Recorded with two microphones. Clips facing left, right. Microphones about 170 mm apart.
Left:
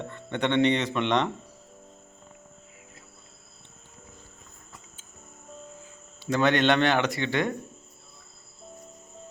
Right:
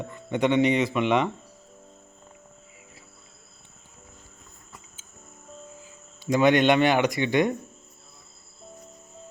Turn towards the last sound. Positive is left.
turn(degrees=-15)  # may be behind; listen again after turning